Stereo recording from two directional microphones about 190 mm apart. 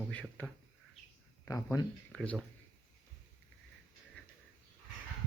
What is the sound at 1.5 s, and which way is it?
Speech, 15° left (ahead or behind).